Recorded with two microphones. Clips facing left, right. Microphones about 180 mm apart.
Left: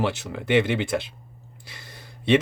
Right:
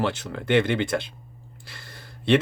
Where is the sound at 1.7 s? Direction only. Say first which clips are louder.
Even; 10° left (ahead or behind).